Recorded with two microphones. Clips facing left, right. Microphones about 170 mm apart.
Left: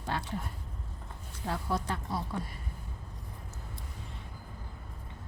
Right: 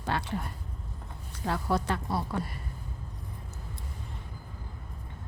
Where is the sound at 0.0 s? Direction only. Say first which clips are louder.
Right 3 dB; 75° right (ahead or behind).